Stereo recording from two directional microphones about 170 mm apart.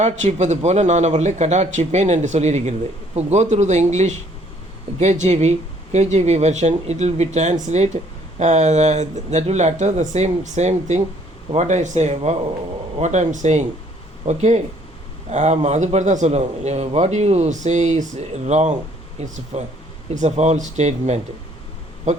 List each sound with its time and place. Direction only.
0.0 s a man's voice: 40° right (ahead or behind)